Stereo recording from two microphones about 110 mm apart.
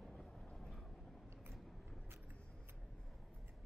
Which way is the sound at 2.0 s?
20° right (ahead or behind).